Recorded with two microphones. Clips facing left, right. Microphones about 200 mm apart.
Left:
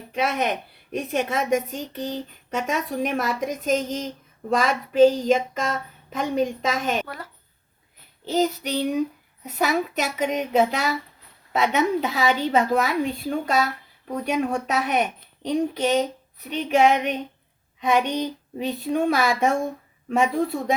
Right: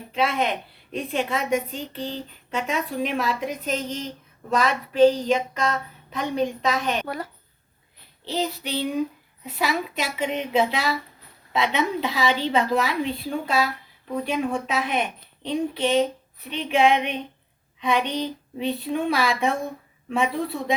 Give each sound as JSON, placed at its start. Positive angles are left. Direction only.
{"t": 0.1, "sound": "speech", "side_deg": 45}
{"t": 8.2, "sound": "speech", "side_deg": 45}
{"t": 18.0, "sound": "a sound", "side_deg": 15}
{"t": 18.6, "sound": "speech", "side_deg": 45}